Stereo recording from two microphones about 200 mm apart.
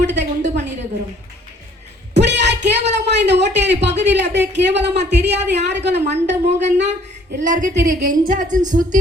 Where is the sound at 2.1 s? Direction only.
60° right (ahead or behind).